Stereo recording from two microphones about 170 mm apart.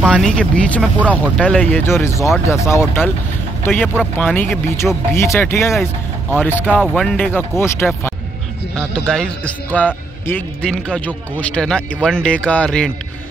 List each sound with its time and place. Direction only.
0.0 s a man's voice: 5° left (ahead or behind)